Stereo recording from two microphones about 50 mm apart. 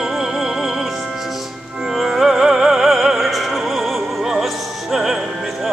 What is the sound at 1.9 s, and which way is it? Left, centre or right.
Music, centre.